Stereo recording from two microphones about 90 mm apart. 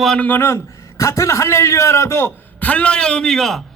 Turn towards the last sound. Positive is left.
turn(degrees=5)  # may be behind; listen again after turning